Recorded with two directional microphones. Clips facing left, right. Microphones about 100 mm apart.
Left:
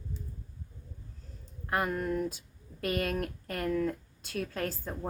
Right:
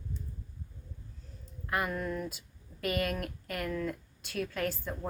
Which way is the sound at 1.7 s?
35° left (ahead or behind).